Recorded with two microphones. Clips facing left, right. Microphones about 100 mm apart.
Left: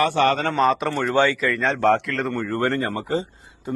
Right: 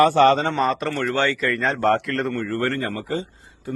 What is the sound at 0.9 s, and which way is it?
Speech, 15° left (ahead or behind).